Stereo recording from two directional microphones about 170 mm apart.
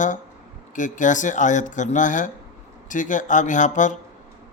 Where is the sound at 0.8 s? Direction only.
50° left (ahead or behind).